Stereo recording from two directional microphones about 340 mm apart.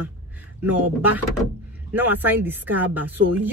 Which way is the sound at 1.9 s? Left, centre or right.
Centre.